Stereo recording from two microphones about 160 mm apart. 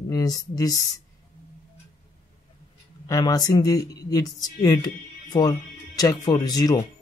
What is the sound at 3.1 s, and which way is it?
Speech, 25° left (ahead or behind).